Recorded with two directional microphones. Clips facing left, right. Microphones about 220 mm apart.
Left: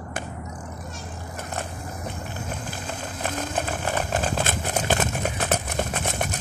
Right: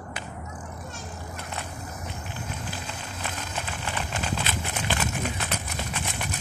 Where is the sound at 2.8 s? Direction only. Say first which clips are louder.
Left 5 dB; 50° left (ahead or behind).